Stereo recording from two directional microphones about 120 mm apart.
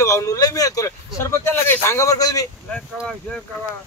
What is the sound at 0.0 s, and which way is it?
Speech, 25° left (ahead or behind).